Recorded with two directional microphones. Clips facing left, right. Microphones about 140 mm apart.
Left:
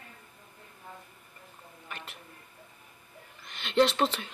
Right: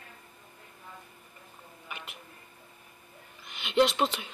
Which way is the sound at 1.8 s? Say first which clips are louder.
Even; 10° right (ahead or behind).